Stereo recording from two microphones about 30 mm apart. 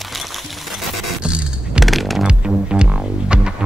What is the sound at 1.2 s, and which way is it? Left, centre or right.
Music, right.